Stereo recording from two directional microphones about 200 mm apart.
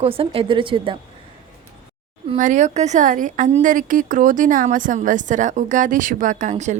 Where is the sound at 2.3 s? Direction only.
40° right (ahead or behind).